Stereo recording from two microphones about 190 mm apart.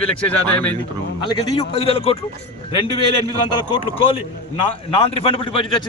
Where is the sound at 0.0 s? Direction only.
5° left (ahead or behind).